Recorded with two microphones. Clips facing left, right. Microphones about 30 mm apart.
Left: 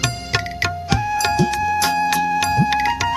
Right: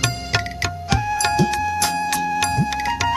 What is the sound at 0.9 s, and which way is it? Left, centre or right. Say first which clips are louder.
Music: even; centre.